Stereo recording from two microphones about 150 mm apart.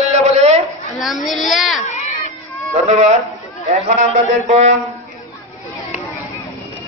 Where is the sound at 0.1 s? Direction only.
45° right (ahead or behind).